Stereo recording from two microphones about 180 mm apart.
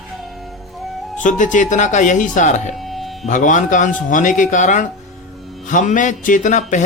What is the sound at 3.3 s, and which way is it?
Speech, 45° left (ahead or behind).